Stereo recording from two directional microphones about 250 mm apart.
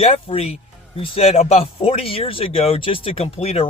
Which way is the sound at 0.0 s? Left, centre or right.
Left.